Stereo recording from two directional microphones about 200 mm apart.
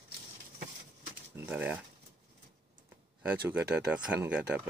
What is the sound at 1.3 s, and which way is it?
Speech, 10° right (ahead or behind).